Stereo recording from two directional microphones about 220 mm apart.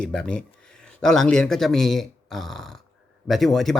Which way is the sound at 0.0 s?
5° left (ahead or behind).